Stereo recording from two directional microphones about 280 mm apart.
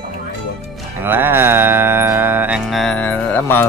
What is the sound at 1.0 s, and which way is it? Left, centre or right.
Mantra, centre.